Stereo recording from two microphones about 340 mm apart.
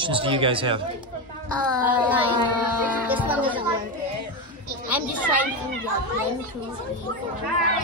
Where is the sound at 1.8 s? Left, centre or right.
Centre.